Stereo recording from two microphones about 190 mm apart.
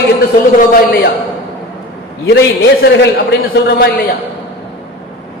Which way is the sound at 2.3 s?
65° left (ahead or behind).